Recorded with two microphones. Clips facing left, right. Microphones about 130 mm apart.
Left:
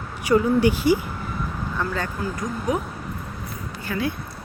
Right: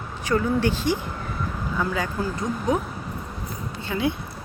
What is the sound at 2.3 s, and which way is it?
Speech, 30° right (ahead or behind).